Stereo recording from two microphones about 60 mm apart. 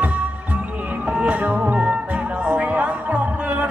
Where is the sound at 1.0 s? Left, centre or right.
Centre.